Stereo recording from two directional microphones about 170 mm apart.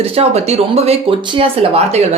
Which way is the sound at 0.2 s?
40° right (ahead or behind).